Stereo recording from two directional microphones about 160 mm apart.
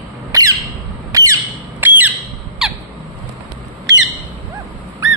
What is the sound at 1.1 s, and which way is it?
Squawk, 20° right (ahead or behind).